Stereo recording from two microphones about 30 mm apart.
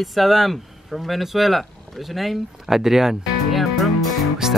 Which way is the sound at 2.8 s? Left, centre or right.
Centre.